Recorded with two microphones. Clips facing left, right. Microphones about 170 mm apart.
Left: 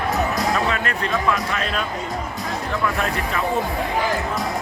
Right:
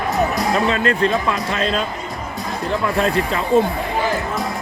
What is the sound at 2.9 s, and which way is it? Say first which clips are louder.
Speech: right 6 dB; 25° right (ahead or behind).